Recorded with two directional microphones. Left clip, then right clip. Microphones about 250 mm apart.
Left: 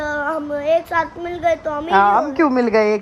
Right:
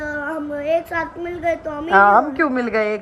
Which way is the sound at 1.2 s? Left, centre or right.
Left.